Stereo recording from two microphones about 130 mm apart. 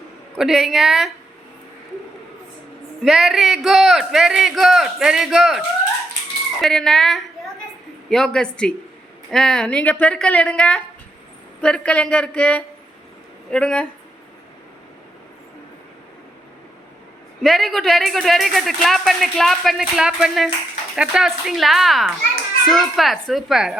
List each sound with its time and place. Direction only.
0.3 s speech: centre (ahead or behind)
3.0 s a woman's voice: centre (ahead or behind)
17.4 s speech: centre (ahead or behind)